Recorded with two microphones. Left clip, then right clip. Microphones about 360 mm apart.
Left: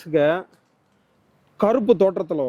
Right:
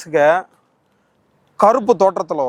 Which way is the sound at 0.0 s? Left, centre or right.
Right.